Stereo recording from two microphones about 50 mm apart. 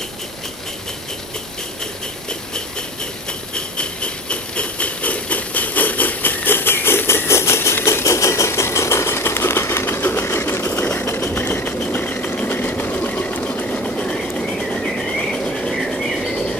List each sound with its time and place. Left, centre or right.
3.5 s a sound: left
11.1 s vehicle: left
11.9 s a sound: left
12.4 s train: left; by 14.5 s centre
14.7 s train: centre
15.3 s insect: centre